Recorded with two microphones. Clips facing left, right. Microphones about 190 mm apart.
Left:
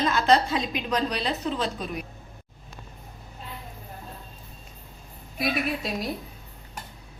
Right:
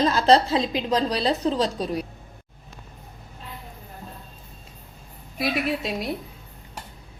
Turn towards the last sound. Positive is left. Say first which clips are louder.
# right 2 dB
turn(degrees=-25)  # may be behind; listen again after turning